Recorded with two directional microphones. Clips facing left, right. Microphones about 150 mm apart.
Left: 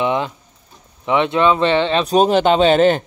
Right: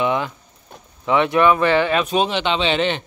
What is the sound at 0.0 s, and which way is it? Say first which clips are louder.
Speech: left 2 dB; 25° left (ahead or behind).